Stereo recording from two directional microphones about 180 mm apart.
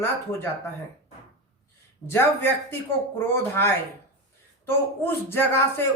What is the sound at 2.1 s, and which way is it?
Speech, 10° left (ahead or behind).